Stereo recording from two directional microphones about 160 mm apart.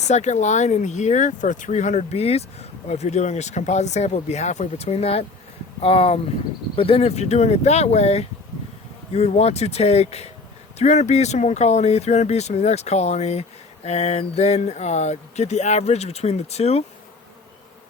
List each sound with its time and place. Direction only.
0.1 s speech: 45° left (ahead or behind)